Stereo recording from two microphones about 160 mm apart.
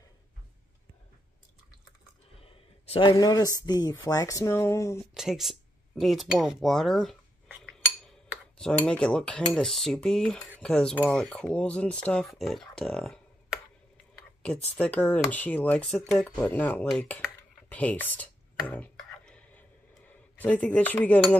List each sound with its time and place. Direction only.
2.4 s speech: 35° left (ahead or behind); by 4.9 s 15° left (ahead or behind)
5.1 s speech: centre (ahead or behind)
8.5 s speech: 5° left (ahead or behind)
14.8 s speech: 10° left (ahead or behind)
19.9 s cutlery: 10° left (ahead or behind)